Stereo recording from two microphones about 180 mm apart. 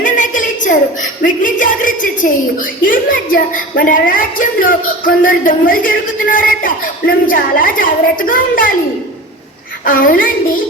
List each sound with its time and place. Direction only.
0.0 s a woman's voice: 45° left (ahead or behind)
9.8 s a woman's voice: 50° left (ahead or behind)